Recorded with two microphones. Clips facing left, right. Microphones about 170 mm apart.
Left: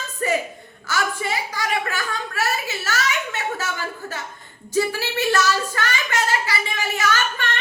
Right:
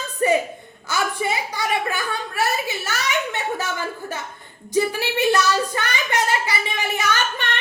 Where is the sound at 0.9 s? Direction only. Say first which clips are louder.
Right 1 dB; 20° right (ahead or behind).